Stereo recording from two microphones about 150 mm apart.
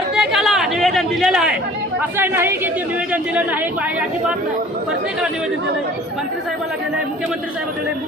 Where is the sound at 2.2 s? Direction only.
15° right (ahead or behind).